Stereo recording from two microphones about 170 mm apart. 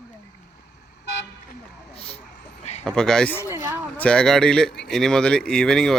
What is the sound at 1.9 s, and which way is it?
Vehicle, 35° left (ahead or behind).